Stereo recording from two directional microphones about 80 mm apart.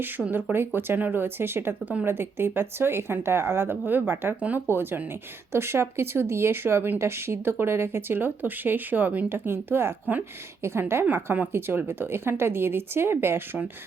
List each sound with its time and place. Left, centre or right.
0.3 s speech: right
4.4 s speech: centre